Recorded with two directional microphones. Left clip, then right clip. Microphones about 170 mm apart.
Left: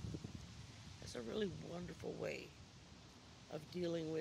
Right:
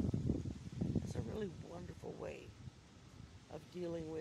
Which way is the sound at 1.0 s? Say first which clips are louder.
Left 1 dB; 15° left (ahead or behind).